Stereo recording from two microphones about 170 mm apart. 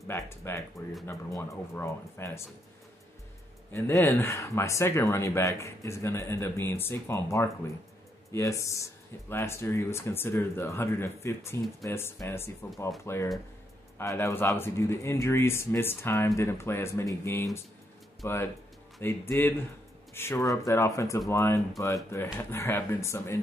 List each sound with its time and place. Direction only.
0.1 s speech: 15° left (ahead or behind)
3.7 s speech: 15° left (ahead or behind)